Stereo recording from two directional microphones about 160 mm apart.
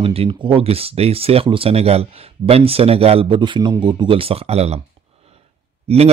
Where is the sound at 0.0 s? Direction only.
35° right (ahead or behind).